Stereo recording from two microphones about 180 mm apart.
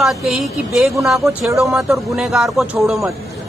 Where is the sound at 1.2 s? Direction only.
15° right (ahead or behind).